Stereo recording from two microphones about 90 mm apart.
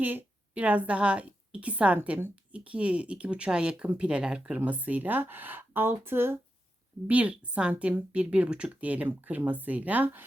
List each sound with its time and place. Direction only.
0.0 s a woman's voice: 20° right (ahead or behind)
7.1 s speech: 15° right (ahead or behind)